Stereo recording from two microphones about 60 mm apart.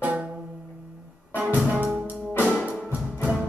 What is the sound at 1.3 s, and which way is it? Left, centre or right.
Music, right.